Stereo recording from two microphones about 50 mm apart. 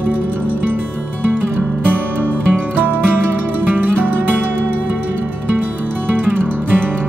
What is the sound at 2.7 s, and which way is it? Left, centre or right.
Music, right.